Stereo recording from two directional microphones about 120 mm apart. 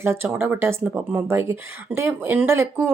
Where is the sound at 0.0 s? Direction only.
20° right (ahead or behind).